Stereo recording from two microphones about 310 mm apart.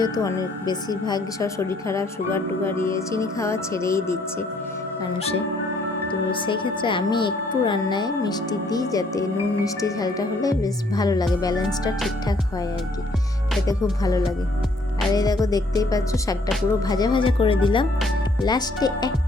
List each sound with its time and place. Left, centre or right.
0.0 s speech: centre
6.3 s speech: centre
15.1 s speech: centre